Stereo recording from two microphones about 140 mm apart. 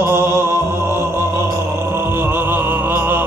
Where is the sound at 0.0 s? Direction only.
15° right (ahead or behind).